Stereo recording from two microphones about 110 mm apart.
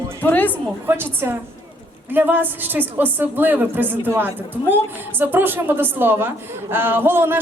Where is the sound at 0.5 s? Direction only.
20° right (ahead or behind).